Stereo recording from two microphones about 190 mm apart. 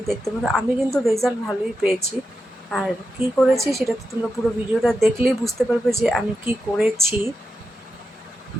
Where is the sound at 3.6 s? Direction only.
15° right (ahead or behind).